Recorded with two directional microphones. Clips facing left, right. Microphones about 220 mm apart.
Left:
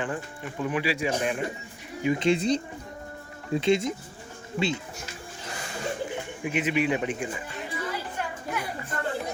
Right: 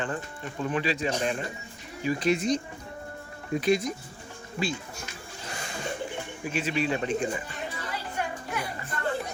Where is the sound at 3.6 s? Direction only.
25° left (ahead or behind).